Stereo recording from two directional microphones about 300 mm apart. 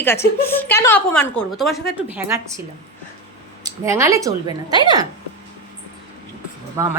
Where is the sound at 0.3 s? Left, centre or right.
Centre.